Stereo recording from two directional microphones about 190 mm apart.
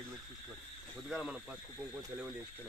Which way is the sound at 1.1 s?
5° right (ahead or behind).